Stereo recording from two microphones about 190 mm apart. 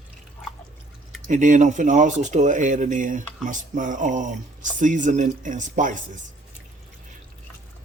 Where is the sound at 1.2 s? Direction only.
40° right (ahead or behind).